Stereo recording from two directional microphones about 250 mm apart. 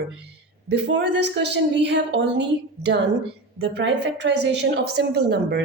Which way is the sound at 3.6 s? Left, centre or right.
Right.